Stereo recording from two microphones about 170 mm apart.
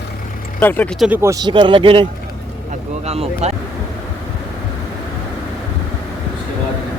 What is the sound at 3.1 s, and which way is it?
Speech, 35° right (ahead or behind).